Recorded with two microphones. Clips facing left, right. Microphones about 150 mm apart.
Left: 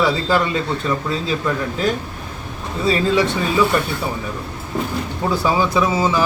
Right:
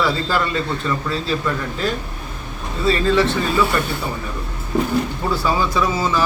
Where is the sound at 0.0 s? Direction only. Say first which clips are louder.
Left 2 dB; 15° left (ahead or behind).